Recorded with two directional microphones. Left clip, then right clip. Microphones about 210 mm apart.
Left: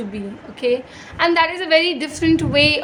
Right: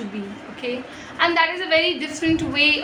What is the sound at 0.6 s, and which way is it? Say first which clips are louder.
A woman's voice: left 9 dB; 50° left (ahead or behind).